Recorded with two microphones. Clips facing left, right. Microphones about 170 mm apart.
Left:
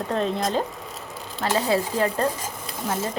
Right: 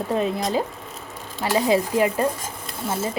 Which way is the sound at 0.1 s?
10° right (ahead or behind).